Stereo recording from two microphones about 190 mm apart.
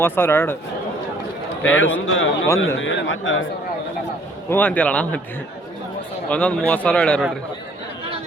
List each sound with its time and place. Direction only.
0.0 s a man's voice: 10° left (ahead or behind)
1.6 s a man's voice: 90° left
4.4 s a man's voice: 10° left (ahead or behind)
6.2 s a man's voice: 5° left (ahead or behind)